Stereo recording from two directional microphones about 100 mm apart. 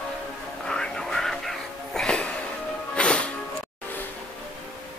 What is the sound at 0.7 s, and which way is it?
Music, 5° left (ahead or behind).